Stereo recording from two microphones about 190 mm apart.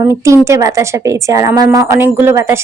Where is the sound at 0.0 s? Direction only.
15° right (ahead or behind).